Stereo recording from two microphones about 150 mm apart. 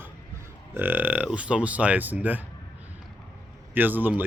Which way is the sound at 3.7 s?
10° right (ahead or behind).